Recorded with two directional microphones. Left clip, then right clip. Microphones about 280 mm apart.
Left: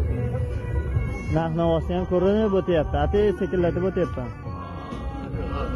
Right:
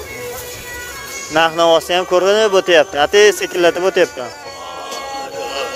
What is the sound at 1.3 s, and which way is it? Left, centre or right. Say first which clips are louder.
Speech: right 12 dB; right.